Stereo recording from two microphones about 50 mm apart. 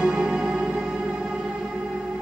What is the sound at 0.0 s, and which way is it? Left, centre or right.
Music, centre.